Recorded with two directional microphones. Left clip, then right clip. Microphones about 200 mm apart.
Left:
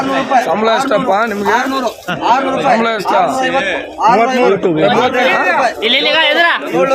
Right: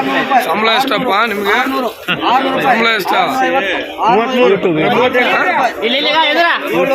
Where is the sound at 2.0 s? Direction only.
20° left (ahead or behind).